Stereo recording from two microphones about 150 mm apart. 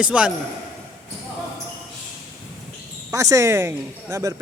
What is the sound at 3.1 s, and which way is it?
Speech, 20° right (ahead or behind).